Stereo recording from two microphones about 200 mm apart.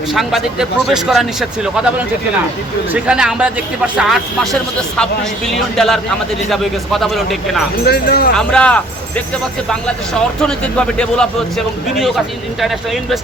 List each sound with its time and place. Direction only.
0.1 s speech: centre (ahead or behind)
7.9 s speech: 50° left (ahead or behind)
8.4 s speech: 5° left (ahead or behind)
10.4 s speech: 5° left (ahead or behind)